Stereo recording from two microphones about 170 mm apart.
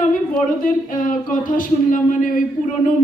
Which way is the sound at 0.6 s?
55° left (ahead or behind).